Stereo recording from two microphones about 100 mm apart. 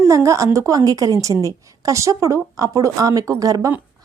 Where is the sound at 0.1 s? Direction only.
30° right (ahead or behind).